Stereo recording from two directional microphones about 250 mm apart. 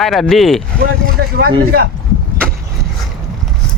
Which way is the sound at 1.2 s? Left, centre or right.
Right.